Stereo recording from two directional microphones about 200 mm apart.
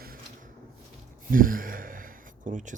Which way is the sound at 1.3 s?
45° right (ahead or behind).